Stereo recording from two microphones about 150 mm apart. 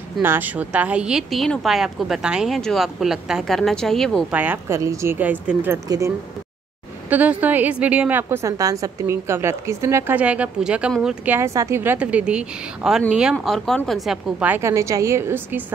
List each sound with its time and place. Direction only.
0.2 s speech: 15° right (ahead or behind); by 4.2 s 5° left (ahead or behind)
4.3 s a woman's voice: 10° right (ahead or behind)
11.3 s a woman's voice: 20° right (ahead or behind)